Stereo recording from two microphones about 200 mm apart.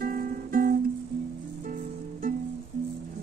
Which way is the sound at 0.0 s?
45° right (ahead or behind).